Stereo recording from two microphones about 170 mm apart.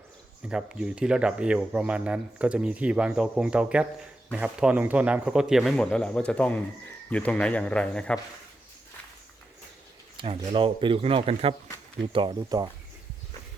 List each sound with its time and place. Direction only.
0.4 s speech: 5° right (ahead or behind)
10.2 s speech: 30° right (ahead or behind)